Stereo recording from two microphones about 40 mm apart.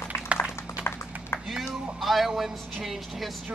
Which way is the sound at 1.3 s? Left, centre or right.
Left.